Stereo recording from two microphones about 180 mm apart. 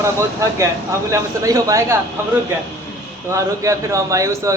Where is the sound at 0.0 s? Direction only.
15° right (ahead or behind).